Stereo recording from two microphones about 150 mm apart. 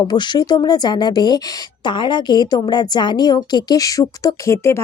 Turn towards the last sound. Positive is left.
turn(degrees=20)  # may be behind; listen again after turning